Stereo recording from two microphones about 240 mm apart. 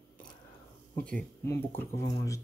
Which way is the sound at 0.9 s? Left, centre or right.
Centre.